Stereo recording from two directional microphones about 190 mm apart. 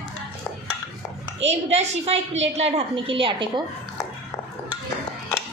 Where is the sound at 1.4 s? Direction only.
35° right (ahead or behind).